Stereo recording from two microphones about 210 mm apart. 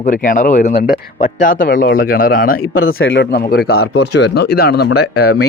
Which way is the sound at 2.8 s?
70° left (ahead or behind).